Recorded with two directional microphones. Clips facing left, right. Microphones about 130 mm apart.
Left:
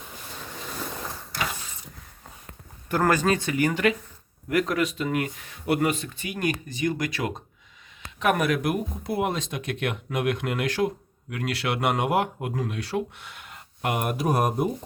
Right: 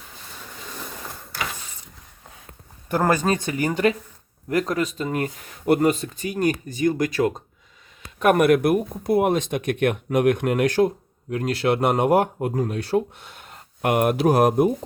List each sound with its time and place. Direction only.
2.9 s speech: 20° right (ahead or behind)
3.4 s speech: 35° right (ahead or behind)
8.2 s speech: 55° right (ahead or behind); by 14.5 s 80° right